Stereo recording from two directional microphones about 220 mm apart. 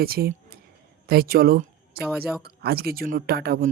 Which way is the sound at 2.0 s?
5° right (ahead or behind).